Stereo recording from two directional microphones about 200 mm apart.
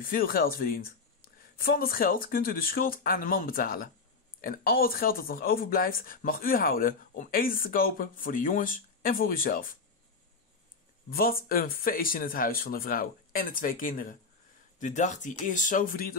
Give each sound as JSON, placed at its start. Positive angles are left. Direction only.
{"t": 0.0, "sound": "speech", "side_deg": 45}
{"t": 11.1, "sound": "speech", "side_deg": 45}